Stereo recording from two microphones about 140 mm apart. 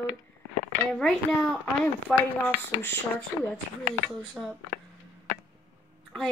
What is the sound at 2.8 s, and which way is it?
Speech, 15° left (ahead or behind).